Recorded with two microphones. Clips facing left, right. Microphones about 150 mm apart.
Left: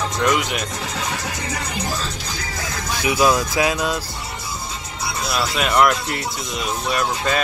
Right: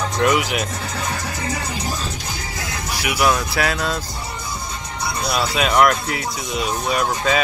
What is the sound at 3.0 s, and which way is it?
Speech, 20° left (ahead or behind).